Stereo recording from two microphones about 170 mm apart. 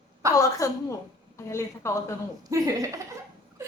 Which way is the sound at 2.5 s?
20° right (ahead or behind).